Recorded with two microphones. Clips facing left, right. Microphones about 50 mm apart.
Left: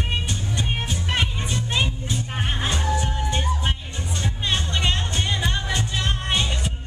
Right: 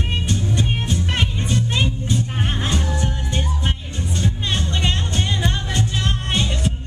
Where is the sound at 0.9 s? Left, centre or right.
Centre.